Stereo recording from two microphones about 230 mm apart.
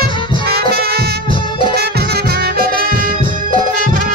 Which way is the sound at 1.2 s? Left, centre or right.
Left.